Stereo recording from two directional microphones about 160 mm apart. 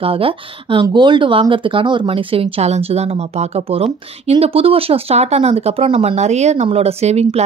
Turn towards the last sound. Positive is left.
turn(degrees=-40)  # may be behind; listen again after turning